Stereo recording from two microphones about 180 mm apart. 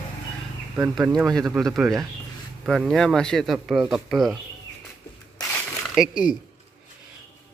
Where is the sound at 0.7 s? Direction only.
10° right (ahead or behind).